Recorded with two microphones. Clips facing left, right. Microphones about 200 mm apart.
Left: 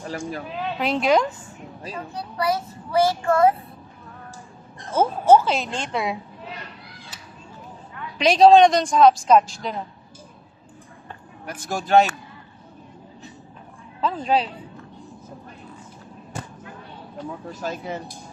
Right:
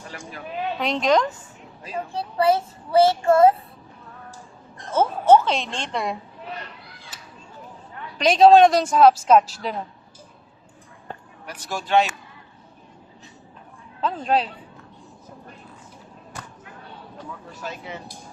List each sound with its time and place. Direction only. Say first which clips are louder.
0.1 s speech: left 10 dB; 40° left (ahead or behind)
0.8 s a woman's voice: left 1 dB; 5° left (ahead or behind)
2.1 s child singing: right 5 dB; 30° right (ahead or behind)
4.9 s speech: even; 10° left (ahead or behind)
8.2 s speech: even; centre (ahead or behind)
11.4 s speech: left 3 dB; 45° left (ahead or behind)
14.0 s speech: left 1 dB; centre (ahead or behind)
17.6 s speech: left 5 dB; 40° left (ahead or behind)